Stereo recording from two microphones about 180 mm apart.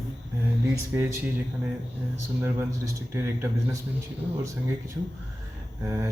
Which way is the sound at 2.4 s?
15° right (ahead or behind).